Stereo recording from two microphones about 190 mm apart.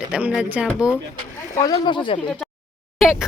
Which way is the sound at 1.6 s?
20° left (ahead or behind).